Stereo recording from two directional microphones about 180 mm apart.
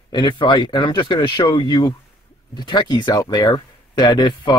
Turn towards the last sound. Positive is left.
turn(degrees=25)  # may be behind; listen again after turning